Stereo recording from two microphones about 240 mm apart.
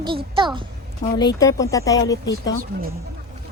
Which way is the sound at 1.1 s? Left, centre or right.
Centre.